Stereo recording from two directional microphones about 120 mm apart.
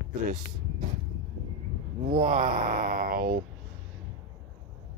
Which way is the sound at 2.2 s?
90° right.